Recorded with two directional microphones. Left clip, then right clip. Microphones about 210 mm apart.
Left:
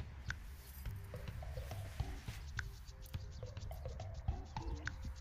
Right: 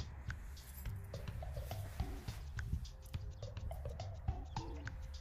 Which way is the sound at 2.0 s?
Centre (ahead or behind).